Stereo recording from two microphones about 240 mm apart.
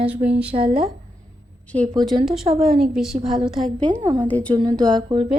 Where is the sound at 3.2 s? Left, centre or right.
Right.